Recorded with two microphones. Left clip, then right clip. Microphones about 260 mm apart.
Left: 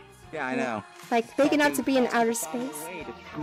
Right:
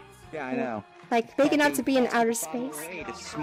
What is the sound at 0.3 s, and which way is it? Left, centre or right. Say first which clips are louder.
Speech: left 2 dB; centre.